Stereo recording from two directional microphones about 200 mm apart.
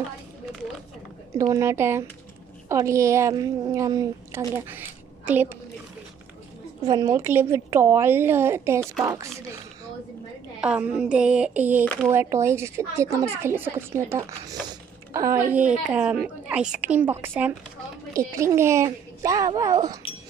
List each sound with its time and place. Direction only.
1.3 s speech: 15° right (ahead or behind)
6.8 s speech: 15° right (ahead or behind)
10.6 s speech: 5° right (ahead or behind)